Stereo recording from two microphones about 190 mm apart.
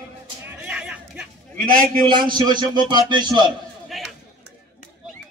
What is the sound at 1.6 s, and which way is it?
Speech, 45° right (ahead or behind).